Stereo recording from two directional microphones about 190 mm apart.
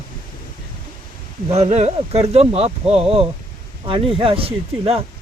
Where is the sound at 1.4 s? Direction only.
35° right (ahead or behind).